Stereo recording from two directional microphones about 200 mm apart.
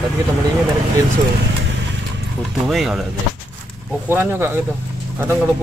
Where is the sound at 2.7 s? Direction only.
Centre (ahead or behind).